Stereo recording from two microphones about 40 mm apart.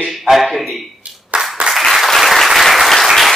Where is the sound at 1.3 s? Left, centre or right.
Right.